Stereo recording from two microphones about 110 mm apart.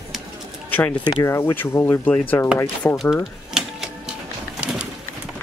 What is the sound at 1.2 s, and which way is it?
Speech, 25° left (ahead or behind).